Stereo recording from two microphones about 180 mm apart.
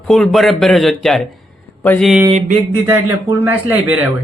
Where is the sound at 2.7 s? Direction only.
10° right (ahead or behind).